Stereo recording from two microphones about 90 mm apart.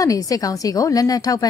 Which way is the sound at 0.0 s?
40° left (ahead or behind).